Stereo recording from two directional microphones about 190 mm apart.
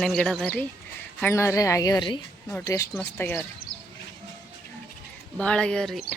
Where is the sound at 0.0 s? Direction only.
Centre (ahead or behind).